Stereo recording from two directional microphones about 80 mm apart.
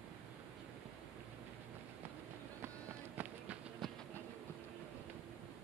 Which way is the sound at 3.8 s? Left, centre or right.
Centre.